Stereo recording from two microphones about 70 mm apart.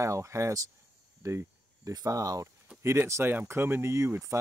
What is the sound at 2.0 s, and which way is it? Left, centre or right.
Speech, right.